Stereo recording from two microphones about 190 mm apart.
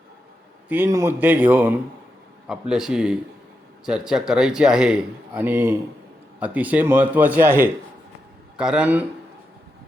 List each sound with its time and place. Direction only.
0.7 s speech: 15° right (ahead or behind)